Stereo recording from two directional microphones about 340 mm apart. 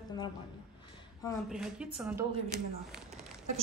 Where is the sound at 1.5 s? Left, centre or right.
Centre.